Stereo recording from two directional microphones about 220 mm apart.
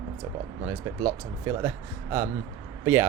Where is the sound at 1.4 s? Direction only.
10° right (ahead or behind).